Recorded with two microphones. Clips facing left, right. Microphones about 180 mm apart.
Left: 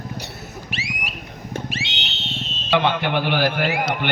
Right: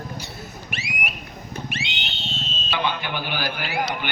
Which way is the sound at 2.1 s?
65° left (ahead or behind).